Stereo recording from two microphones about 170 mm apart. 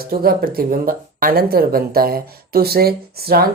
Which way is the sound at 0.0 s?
60° right (ahead or behind).